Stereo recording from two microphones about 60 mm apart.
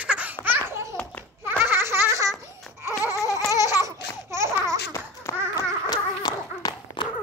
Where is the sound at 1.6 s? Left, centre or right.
Right.